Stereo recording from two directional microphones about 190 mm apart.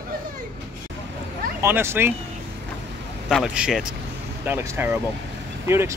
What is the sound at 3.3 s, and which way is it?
Speech, centre (ahead or behind).